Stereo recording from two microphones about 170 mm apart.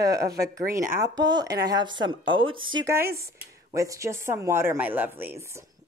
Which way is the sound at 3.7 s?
20° right (ahead or behind).